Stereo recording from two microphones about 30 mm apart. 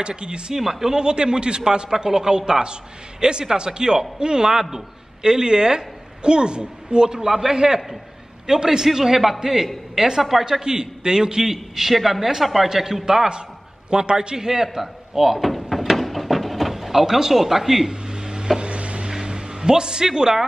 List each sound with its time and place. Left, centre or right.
0.0 s speech: right
0.6 s a man's voice: centre
0.9 s speech: right
5.2 s speech: right
8.8 s a man's voice: centre
11.4 s a man's voice: centre
12.2 s a man's voice: centre
15.7 s a sound: centre
16.7 s speech: centre
18.0 s a sound: right
18.6 s a sound: right
19.0 s music: right